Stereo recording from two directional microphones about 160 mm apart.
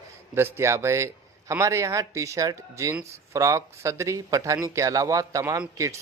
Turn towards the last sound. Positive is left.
turn(degrees=-20)  # may be behind; listen again after turning